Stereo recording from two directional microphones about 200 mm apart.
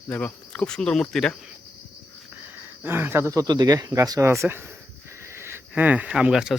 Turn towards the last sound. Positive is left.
turn(degrees=-5)  # may be behind; listen again after turning